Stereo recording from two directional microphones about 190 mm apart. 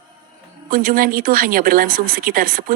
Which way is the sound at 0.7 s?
50° right (ahead or behind).